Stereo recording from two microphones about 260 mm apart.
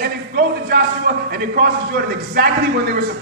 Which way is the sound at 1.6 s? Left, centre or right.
Right.